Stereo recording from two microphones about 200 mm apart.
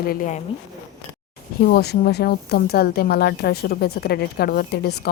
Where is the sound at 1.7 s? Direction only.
50° left (ahead or behind).